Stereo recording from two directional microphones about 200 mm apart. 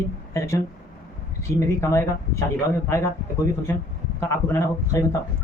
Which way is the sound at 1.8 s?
15° left (ahead or behind).